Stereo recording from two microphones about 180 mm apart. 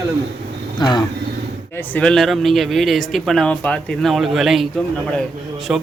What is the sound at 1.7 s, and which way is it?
Speech, 5° left (ahead or behind).